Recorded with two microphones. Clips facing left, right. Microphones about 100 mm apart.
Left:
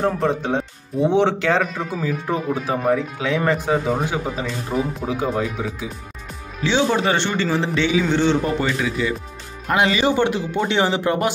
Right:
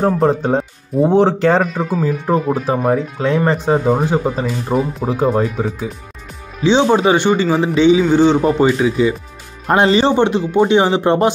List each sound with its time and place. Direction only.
0.0 s speech: 40° right (ahead or behind)
6.6 s speech: 20° right (ahead or behind)
10.1 s speech: 20° right (ahead or behind)